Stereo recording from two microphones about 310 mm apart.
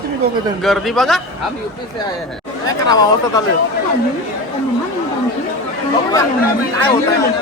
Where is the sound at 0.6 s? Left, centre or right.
Centre.